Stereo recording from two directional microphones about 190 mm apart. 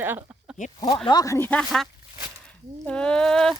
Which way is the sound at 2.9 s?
5° left (ahead or behind).